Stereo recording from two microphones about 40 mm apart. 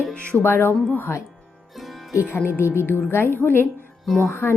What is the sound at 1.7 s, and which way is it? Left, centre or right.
Music, centre.